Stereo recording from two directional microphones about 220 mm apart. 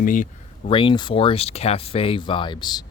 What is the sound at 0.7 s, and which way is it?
Speech, 20° left (ahead or behind).